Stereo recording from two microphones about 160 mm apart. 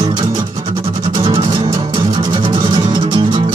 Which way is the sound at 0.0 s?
30° right (ahead or behind).